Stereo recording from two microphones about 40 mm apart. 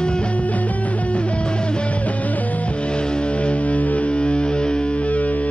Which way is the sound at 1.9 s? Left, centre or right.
Left.